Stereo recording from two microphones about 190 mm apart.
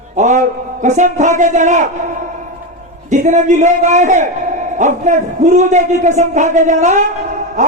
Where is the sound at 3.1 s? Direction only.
40° right (ahead or behind).